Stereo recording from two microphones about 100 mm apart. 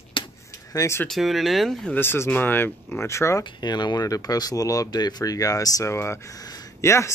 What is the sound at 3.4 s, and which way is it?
Speech, 45° left (ahead or behind).